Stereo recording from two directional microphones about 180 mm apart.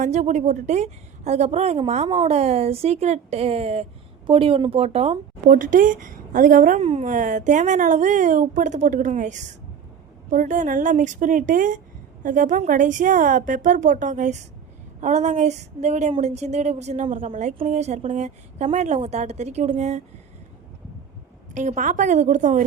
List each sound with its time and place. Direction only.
0.0 s a woman's voice: 40° right (ahead or behind)
5.5 s a woman's voice: 50° right (ahead or behind)
21.5 s a woman's voice: 45° right (ahead or behind)